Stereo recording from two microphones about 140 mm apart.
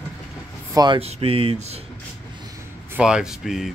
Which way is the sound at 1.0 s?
45° right (ahead or behind).